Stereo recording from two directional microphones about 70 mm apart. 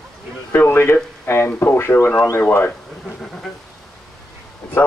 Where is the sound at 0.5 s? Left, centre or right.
Left.